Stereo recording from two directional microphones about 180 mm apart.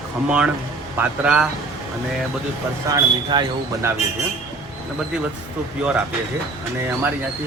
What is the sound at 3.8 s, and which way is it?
Speech, 15° right (ahead or behind).